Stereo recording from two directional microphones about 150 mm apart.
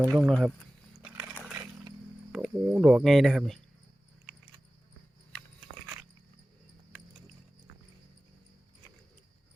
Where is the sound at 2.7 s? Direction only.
5° right (ahead or behind).